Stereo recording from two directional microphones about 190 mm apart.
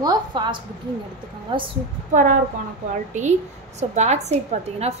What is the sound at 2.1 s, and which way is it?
A woman's voice, 45° right (ahead or behind).